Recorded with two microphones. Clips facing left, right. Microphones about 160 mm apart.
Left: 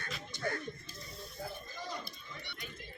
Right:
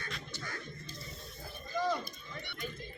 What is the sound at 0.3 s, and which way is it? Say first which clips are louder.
Music: left 7 dB; 55° left (ahead or behind).